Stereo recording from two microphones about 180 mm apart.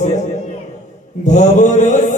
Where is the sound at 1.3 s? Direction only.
45° left (ahead or behind).